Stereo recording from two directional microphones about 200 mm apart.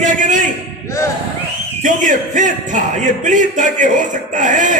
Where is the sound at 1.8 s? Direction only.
40° right (ahead or behind).